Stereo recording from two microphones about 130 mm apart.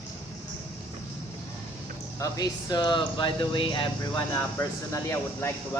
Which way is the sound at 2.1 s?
30° left (ahead or behind).